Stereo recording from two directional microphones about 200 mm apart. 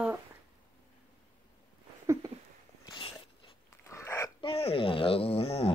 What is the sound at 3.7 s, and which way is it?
Dog, 15° left (ahead or behind).